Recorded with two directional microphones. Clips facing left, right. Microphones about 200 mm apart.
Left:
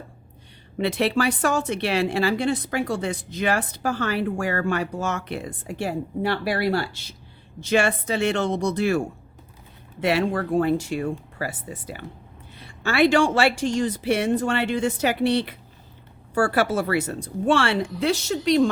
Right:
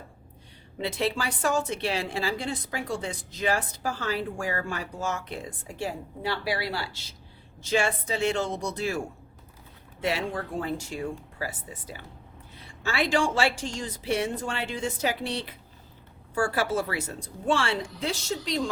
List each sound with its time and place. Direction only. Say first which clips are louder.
0.8 s a woman's voice: left 7 dB; 70° left (ahead or behind)
7.6 s a woman's voice: left 5 dB; 70° left (ahead or behind)
10.0 s a woman's voice: left 7 dB; 70° left (ahead or behind)